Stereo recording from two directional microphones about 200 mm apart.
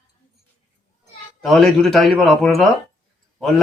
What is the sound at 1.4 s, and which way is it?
Speech, centre (ahead or behind).